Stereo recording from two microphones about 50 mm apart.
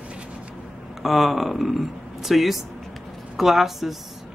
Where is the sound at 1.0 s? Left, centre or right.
Centre.